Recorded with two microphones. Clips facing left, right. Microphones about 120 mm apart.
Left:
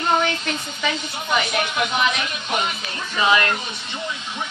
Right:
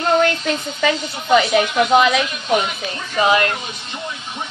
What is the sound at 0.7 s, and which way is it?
A woman's voice, 90° right.